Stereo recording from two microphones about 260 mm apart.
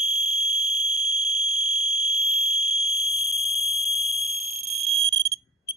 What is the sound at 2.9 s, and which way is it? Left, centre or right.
Fire alarm, centre.